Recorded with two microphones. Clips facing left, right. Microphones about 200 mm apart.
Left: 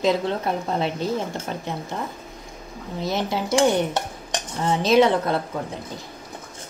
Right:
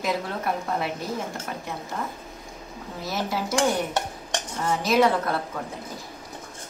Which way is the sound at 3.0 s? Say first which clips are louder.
Left 4 dB; 20° left (ahead or behind).